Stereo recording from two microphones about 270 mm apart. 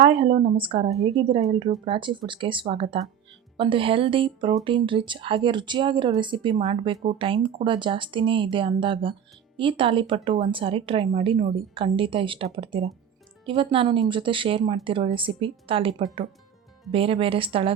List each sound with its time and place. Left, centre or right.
0.0 s a woman's voice: centre